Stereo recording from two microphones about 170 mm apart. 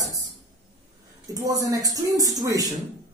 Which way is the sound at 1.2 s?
20° right (ahead or behind).